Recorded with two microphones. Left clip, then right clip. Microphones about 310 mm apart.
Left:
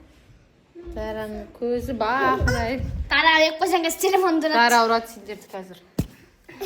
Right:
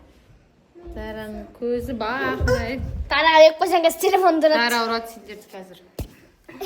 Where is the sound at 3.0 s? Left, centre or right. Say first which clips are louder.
Right 4 dB; right.